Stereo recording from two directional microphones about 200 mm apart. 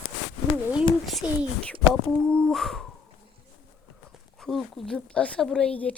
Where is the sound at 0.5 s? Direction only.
5° right (ahead or behind).